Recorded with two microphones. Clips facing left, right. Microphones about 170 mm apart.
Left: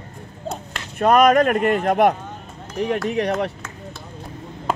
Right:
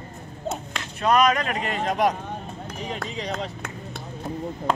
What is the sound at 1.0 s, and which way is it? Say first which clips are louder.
Speech: left 6 dB; 50° left (ahead or behind).